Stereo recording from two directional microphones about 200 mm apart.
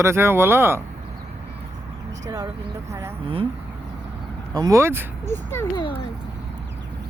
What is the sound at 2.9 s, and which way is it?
Speech, 15° right (ahead or behind).